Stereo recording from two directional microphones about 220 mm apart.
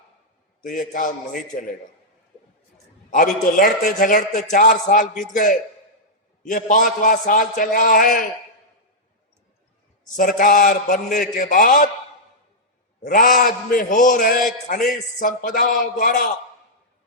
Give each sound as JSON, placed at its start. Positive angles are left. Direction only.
{"t": 0.6, "sound": "a man's voice", "side_deg": 35}
{"t": 3.1, "sound": "a man's voice", "side_deg": 35}
{"t": 10.2, "sound": "a man's voice", "side_deg": 40}
{"t": 13.1, "sound": "a man's voice", "side_deg": 40}